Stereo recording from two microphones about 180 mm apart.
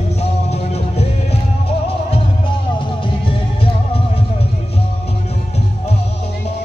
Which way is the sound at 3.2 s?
30° left (ahead or behind).